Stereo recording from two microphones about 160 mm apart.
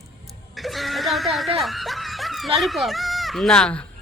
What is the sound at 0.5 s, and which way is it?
Snicker, centre (ahead or behind).